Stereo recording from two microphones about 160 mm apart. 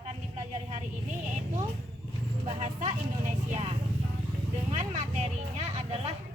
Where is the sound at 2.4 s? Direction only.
45° right (ahead or behind).